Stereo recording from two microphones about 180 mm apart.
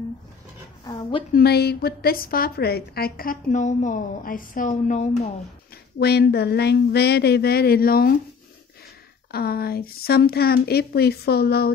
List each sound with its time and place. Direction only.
0.8 s a woman's voice: 20° left (ahead or behind)
1.3 s a woman's voice: 60° left (ahead or behind); by 5.3 s 40° left (ahead or behind)
5.9 s speech: 65° left (ahead or behind)
9.3 s speech: 60° left (ahead or behind)